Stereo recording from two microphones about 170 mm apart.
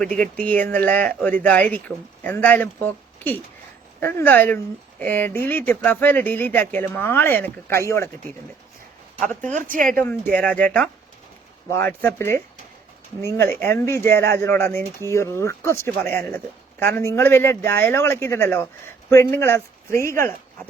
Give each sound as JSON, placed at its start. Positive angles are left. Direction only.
{"t": 0.0, "sound": "speech", "side_deg": 5}
{"t": 4.0, "sound": "speech", "side_deg": 10}
{"t": 9.5, "sound": "a woman's voice", "side_deg": -50}
{"t": 9.9, "sound": "speech", "side_deg": 10}